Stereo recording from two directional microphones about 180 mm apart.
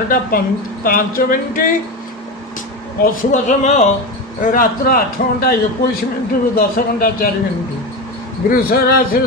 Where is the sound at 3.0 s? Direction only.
45° left (ahead or behind).